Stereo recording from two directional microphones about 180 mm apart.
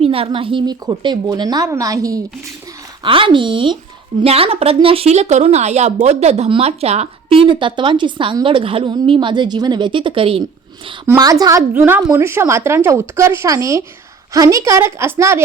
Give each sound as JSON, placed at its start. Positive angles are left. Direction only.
{"t": 0.0, "sound": "a woman's voice", "side_deg": -30}
{"t": 11.0, "sound": "speech", "side_deg": -15}